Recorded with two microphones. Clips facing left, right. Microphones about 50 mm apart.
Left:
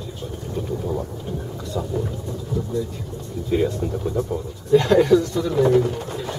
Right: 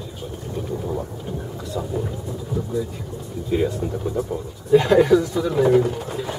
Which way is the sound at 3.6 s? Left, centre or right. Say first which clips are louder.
Even; centre.